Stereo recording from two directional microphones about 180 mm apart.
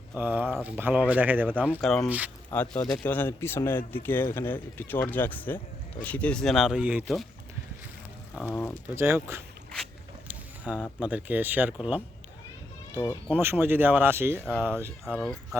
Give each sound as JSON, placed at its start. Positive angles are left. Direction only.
{"t": 0.2, "sound": "speech", "side_deg": -10}
{"t": 2.7, "sound": "a man's voice", "side_deg": 25}
{"t": 3.1, "sound": "speech", "side_deg": 10}
{"t": 8.4, "sound": "speech", "side_deg": -10}
{"t": 10.7, "sound": "speech", "side_deg": -5}
{"t": 13.0, "sound": "speech", "side_deg": 15}
{"t": 13.3, "sound": "speech", "side_deg": -10}
{"t": 15.0, "sound": "speech", "side_deg": 0}